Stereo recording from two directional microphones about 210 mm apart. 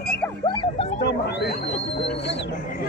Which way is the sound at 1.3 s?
50° left (ahead or behind).